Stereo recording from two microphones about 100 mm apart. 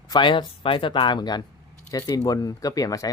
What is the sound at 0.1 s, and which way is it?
Speech, 55° left (ahead or behind).